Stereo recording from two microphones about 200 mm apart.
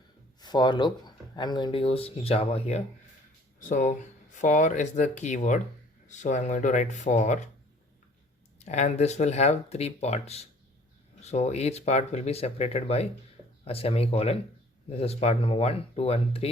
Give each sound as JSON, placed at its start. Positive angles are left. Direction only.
{"t": 0.3, "sound": "speech", "side_deg": 20}
{"t": 8.5, "sound": "speech", "side_deg": 35}